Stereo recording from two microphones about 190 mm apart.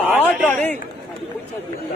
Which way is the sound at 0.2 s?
10° left (ahead or behind).